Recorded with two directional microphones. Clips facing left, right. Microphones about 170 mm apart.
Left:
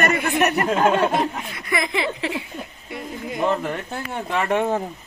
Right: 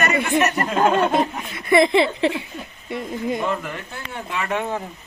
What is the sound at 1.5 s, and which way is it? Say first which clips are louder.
Speech: right 12 dB; 25° right (ahead or behind).